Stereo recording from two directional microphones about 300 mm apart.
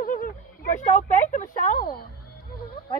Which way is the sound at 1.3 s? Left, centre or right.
Left.